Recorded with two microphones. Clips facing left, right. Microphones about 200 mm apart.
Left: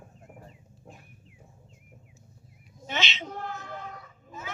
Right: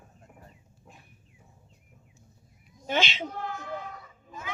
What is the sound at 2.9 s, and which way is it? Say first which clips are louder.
Speech: right 5 dB; 50° right (ahead or behind).